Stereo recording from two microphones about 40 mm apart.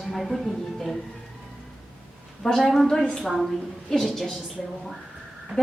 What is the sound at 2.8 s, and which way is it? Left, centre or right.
Speech, centre.